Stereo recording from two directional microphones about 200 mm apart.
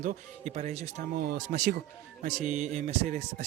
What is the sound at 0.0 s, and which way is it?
Speech, 35° right (ahead or behind).